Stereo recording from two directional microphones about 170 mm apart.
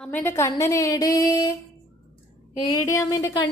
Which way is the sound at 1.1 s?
20° left (ahead or behind).